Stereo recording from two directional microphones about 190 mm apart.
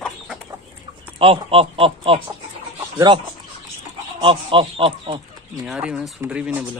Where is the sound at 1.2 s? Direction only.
30° right (ahead or behind).